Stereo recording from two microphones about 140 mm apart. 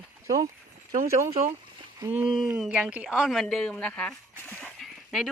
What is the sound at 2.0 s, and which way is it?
Speech, 15° right (ahead or behind).